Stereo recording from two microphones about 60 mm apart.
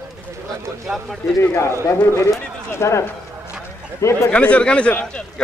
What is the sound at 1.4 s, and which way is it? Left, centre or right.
Speech, left.